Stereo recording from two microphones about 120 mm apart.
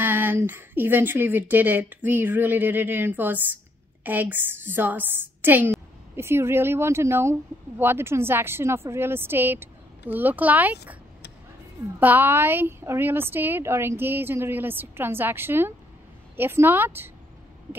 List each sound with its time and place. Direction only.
0.0 s a woman's voice: 15° right (ahead or behind)
12.0 s a woman's voice: 15° right (ahead or behind)